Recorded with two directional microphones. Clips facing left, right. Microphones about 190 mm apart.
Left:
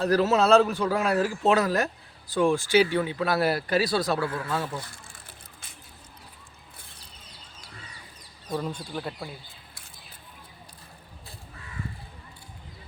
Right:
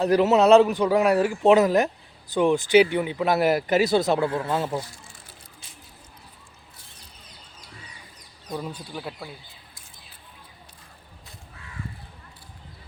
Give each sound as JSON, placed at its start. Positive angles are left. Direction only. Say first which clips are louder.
{"t": 0.0, "sound": "a man's voice", "louder": "right 4 dB", "side_deg": -20}
{"t": 8.5, "sound": "speech", "louder": "left 2 dB", "side_deg": -5}